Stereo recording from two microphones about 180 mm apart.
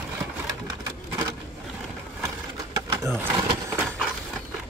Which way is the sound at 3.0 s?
15° right (ahead or behind).